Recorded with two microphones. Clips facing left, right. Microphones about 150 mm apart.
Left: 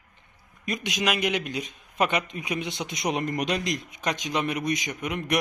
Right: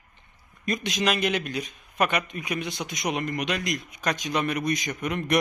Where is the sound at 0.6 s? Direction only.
10° left (ahead or behind).